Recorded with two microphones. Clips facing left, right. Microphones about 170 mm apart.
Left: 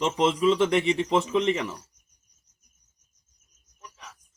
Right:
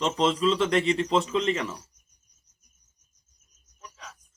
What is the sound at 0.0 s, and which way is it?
A man's voice, 10° left (ahead or behind).